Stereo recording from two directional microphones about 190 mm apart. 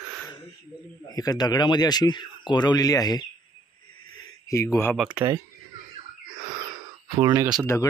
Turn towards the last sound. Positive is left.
turn(degrees=-20)  # may be behind; listen again after turning